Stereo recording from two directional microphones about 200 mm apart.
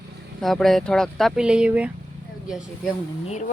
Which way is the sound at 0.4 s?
Centre (ahead or behind).